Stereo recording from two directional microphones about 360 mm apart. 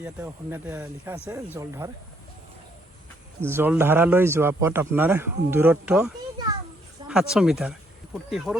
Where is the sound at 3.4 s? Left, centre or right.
Centre.